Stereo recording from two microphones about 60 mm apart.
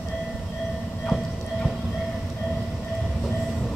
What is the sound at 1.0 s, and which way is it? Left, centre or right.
Clip-clop, centre.